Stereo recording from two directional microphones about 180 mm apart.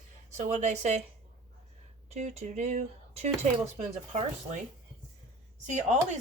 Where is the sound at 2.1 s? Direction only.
40° right (ahead or behind).